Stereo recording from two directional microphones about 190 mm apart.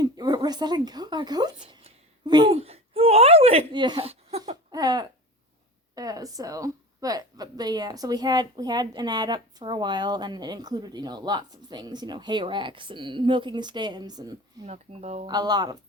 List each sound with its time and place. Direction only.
0.0 s a sound: 20° right (ahead or behind)
2.6 s speech: 30° right (ahead or behind)
4.7 s a woman's voice: 20° right (ahead or behind)
14.6 s speech: 35° right (ahead or behind)
15.3 s a woman's voice: 20° right (ahead or behind)